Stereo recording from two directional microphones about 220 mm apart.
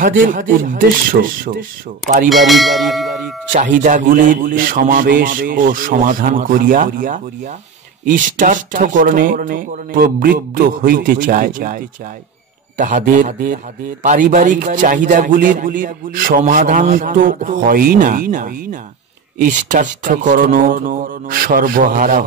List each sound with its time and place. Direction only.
0.0 s a man's voice: 40° right (ahead or behind)
2.2 s speech: centre (ahead or behind)
3.5 s a man's voice: 35° right (ahead or behind)